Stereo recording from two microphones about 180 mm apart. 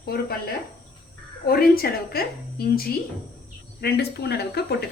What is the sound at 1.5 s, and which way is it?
A woman's voice, 55° left (ahead or behind).